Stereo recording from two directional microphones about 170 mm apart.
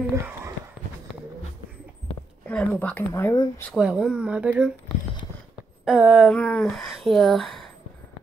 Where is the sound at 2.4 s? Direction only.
5° left (ahead or behind).